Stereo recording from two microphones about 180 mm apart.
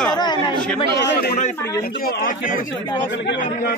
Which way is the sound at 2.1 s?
50° left (ahead or behind).